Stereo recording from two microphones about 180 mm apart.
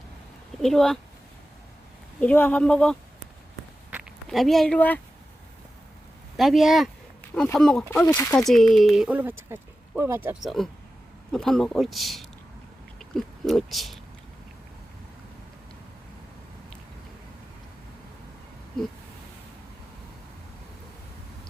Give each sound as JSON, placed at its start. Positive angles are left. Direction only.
{"t": 0.6, "sound": "speech", "side_deg": 0}
{"t": 2.2, "sound": "speech", "side_deg": 10}
{"t": 4.3, "sound": "speech", "side_deg": 0}
{"t": 6.3, "sound": "speech", "side_deg": 0}
{"t": 8.0, "sound": "speech", "side_deg": 15}
{"t": 8.4, "sound": "speech", "side_deg": 0}
{"t": 10.4, "sound": "speech", "side_deg": 0}